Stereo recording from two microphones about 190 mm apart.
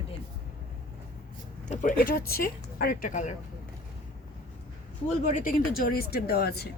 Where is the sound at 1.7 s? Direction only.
40° left (ahead or behind).